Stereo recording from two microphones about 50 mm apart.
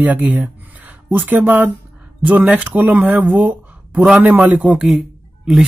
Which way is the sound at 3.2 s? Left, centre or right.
Right.